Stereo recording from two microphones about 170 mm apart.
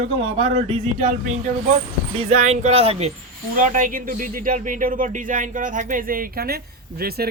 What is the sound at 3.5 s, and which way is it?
Speech, 50° right (ahead or behind).